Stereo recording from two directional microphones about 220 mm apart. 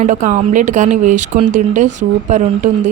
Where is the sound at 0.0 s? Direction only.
35° right (ahead or behind).